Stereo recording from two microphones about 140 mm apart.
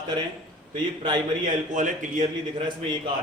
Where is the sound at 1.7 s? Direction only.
65° right (ahead or behind).